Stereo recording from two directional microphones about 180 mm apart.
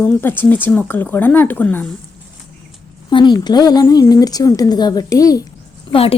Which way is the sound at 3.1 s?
25° left (ahead or behind).